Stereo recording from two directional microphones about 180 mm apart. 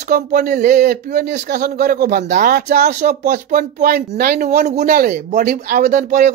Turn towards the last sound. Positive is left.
turn(degrees=-45)  # may be behind; listen again after turning